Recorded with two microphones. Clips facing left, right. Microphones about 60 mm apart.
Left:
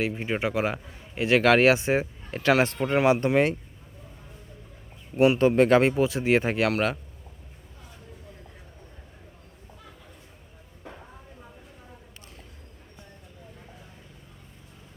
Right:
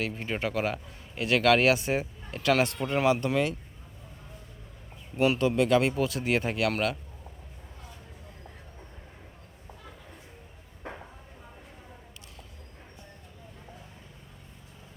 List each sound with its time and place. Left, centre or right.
0.0 s a man's voice: centre
5.1 s a man's voice: centre
5.4 s speech: left
5.9 s a man's voice: left
10.8 s a sound: right